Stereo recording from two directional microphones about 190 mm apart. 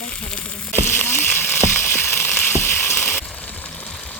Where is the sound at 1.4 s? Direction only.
10° left (ahead or behind).